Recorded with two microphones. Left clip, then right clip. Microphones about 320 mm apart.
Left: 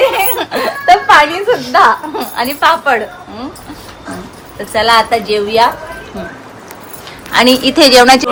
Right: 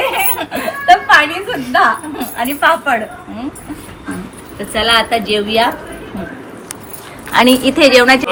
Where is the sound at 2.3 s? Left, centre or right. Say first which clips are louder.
Left 2 dB; centre.